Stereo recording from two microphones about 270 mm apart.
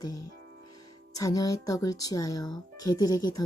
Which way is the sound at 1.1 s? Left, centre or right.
Centre.